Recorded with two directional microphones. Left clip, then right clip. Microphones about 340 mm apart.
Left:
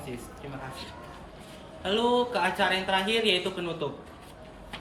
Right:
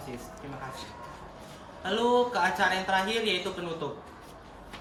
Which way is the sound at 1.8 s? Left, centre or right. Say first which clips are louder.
Even; centre.